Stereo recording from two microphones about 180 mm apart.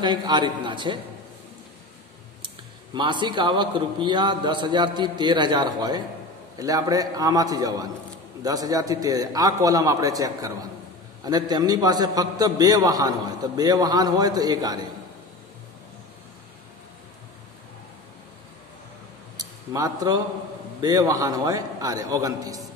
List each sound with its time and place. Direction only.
0.0 s a man's voice: 25° right (ahead or behind)
2.9 s a man's voice: 25° right (ahead or behind)
19.3 s a sound: 20° right (ahead or behind)
20.8 s a man's voice: 20° right (ahead or behind)